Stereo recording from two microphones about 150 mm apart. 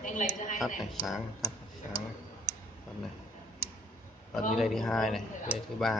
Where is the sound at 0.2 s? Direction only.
60° left (ahead or behind).